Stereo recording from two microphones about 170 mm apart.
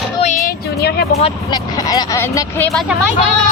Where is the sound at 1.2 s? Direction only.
25° left (ahead or behind).